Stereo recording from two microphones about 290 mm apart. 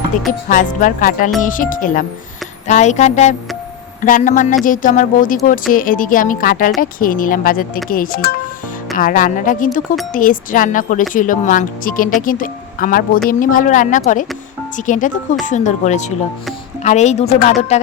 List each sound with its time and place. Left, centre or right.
0.4 s speech: left